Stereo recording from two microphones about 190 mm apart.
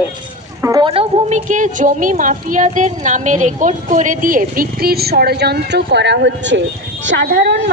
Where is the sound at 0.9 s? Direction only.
30° right (ahead or behind).